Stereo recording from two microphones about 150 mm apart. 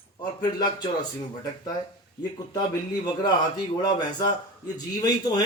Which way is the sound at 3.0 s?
25° left (ahead or behind).